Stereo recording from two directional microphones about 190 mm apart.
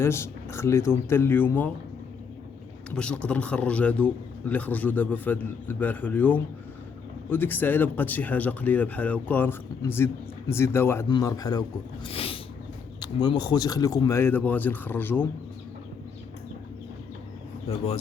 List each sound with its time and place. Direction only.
0.0 s a man's voice: 15° left (ahead or behind)
2.9 s a man's voice: 5° left (ahead or behind)
12.0 s a sound: 30° left (ahead or behind)
13.2 s a man's voice: 20° left (ahead or behind)
17.7 s speech: 30° left (ahead or behind)